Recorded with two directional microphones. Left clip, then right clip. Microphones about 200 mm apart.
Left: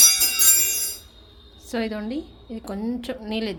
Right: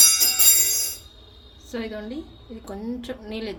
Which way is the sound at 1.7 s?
40° left (ahead or behind).